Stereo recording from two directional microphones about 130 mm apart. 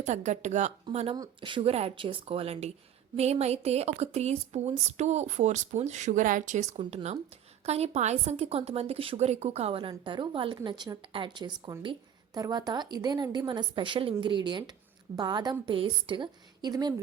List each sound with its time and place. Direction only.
0.0 s speech: 65° right (ahead or behind)
1.1 s a woman's voice: 35° right (ahead or behind)